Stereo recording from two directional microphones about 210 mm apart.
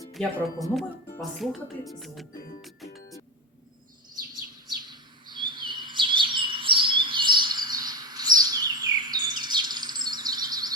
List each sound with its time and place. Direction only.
0.2 s speech: 5° left (ahead or behind)
2.6 s music: centre (ahead or behind)
4.9 s chirp: 20° right (ahead or behind)